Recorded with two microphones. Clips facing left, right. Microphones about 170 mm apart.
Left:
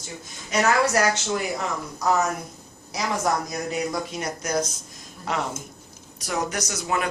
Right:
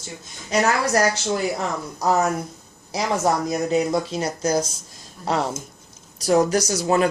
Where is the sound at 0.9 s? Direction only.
35° right (ahead or behind).